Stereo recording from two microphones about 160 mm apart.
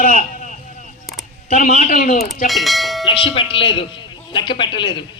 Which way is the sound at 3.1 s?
35° left (ahead or behind).